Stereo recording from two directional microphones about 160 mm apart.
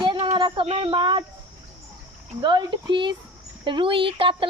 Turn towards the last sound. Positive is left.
turn(degrees=-35)  # may be behind; listen again after turning